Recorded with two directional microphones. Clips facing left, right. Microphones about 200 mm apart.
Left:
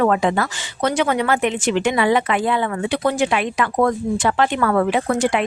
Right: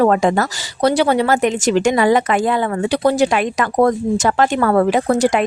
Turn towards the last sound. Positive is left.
turn(degrees=-40)  # may be behind; listen again after turning